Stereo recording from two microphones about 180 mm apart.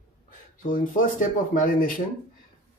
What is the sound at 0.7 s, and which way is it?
Speech, 50° left (ahead or behind).